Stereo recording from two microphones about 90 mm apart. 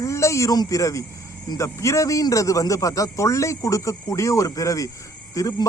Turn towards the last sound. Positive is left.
turn(degrees=40)  # may be behind; listen again after turning